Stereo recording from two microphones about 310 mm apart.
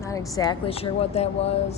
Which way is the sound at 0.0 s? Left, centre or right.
Centre.